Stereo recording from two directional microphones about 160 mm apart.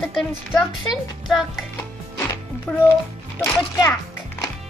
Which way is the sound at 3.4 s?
15° left (ahead or behind).